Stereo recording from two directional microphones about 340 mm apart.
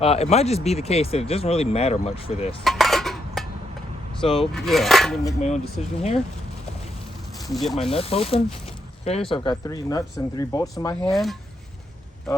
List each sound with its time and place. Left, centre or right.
0.0 s speech: centre
2.6 s cutlery: centre
4.2 s speech: centre
4.5 s speech: centre
5.8 s speech: centre
7.3 s speech: centre
7.9 s speech: centre
8.6 s a sound: centre
9.3 s speech: centre